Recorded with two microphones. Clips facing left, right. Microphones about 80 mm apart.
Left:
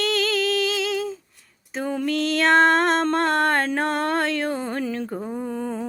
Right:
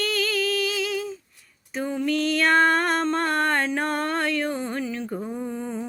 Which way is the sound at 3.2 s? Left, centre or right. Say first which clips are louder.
Left 3 dB; left.